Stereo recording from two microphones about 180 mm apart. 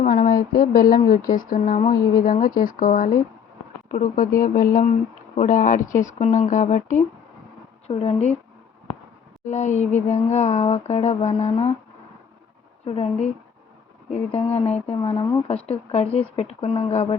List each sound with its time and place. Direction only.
0.0 s speech: 45° left (ahead or behind)
7.9 s speech: 30° left (ahead or behind)
9.4 s speech: 40° left (ahead or behind)
12.8 s speech: 35° left (ahead or behind)
14.9 s speech: 25° left (ahead or behind)